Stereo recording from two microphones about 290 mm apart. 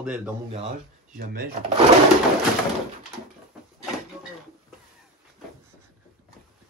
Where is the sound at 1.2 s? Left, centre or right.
Right.